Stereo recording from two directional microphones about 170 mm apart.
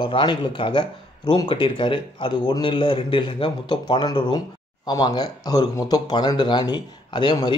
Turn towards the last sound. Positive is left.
turn(degrees=30)  # may be behind; listen again after turning